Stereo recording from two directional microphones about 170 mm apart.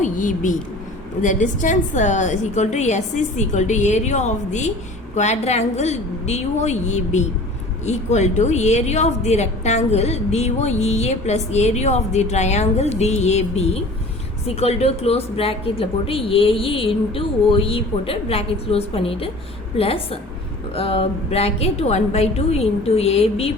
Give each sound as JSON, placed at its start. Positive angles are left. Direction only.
{"t": 0.0, "sound": "a woman's voice", "side_deg": 50}